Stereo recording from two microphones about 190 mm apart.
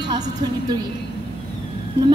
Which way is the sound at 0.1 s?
20° right (ahead or behind).